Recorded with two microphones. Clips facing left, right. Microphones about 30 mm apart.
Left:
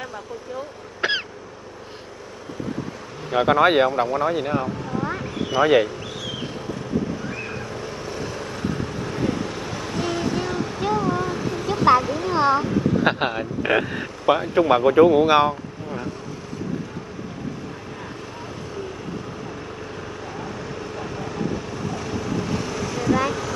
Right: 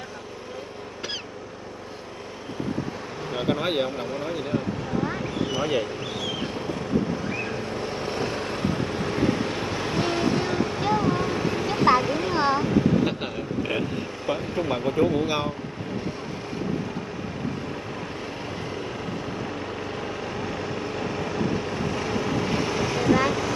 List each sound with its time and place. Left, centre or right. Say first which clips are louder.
3.3 s speech: left 9 dB; left
5.6 s speech: left 11 dB; left
7.7 s vehicle: right 2 dB; right; by 11.8 s centre
12.3 s a sound: left 5 dB; centre
13.0 s speech: left 5 dB; left
20.3 s vehicle: right 2 dB; right